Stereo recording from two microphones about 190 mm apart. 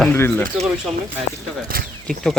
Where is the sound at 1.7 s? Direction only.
50° right (ahead or behind).